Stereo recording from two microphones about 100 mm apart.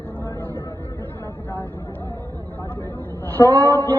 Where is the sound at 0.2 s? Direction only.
20° left (ahead or behind).